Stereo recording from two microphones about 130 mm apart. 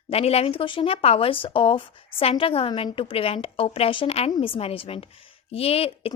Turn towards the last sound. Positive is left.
turn(degrees=50)  # may be behind; listen again after turning